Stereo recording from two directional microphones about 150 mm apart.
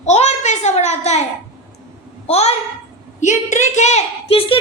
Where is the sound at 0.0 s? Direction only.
50° left (ahead or behind).